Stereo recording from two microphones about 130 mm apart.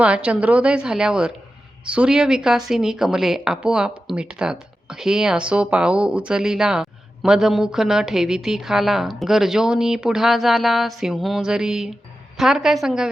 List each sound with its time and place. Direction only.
0.0 s a woman's voice: 10° right (ahead or behind)